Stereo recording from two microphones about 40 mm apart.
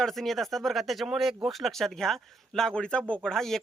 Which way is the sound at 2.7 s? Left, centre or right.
Left.